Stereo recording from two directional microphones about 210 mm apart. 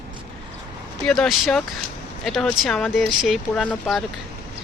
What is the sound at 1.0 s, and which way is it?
Speech, centre (ahead or behind).